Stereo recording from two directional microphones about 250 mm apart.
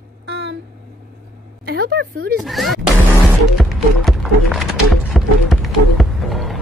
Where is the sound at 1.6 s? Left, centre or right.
Right.